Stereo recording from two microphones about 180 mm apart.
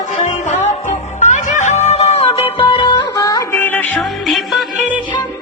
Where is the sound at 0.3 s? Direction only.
40° left (ahead or behind); by 4.0 s 10° left (ahead or behind).